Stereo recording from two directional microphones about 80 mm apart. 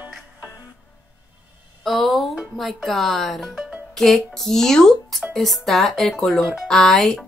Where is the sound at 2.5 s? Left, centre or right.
Centre.